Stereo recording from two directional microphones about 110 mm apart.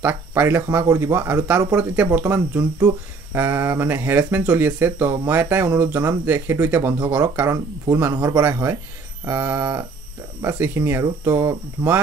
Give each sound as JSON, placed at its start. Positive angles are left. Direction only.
{"t": 0.0, "sound": "speech", "side_deg": -20}